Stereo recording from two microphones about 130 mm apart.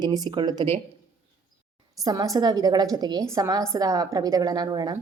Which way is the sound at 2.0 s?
25° right (ahead or behind).